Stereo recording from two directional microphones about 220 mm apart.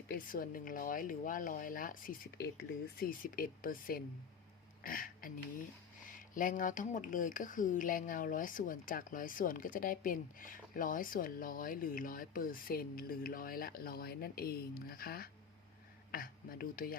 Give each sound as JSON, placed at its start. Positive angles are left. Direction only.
{"t": 0.1, "sound": "speech", "side_deg": 40}
{"t": 4.8, "sound": "a sound", "side_deg": 40}
{"t": 6.3, "sound": "speech", "side_deg": 35}